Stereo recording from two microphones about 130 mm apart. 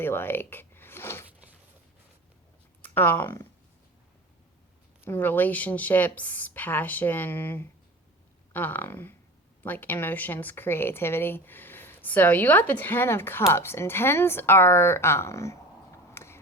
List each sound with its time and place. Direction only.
0.0 s speech: 15° left (ahead or behind)
2.8 s speech: 15° left (ahead or behind)
5.0 s speech: 15° left (ahead or behind)
16.1 s a sound: 20° left (ahead or behind)